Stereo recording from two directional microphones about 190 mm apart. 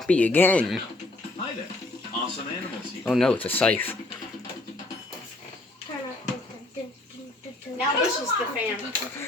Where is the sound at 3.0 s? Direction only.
Centre (ahead or behind).